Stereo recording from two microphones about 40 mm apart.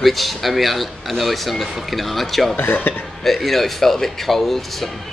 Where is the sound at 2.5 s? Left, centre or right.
Left.